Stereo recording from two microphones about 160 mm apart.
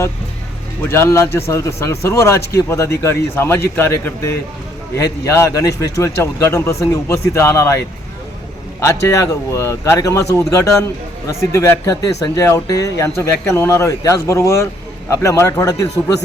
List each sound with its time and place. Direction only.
0.8 s a man's voice: 15° left (ahead or behind)
8.8 s a man's voice: 20° left (ahead or behind)